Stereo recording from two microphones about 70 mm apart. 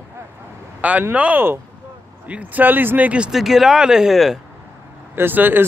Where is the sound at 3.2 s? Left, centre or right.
Centre.